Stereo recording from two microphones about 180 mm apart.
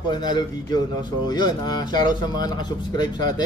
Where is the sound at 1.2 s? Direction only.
25° left (ahead or behind).